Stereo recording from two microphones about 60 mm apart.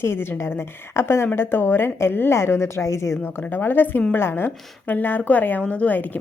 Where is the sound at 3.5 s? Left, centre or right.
Left.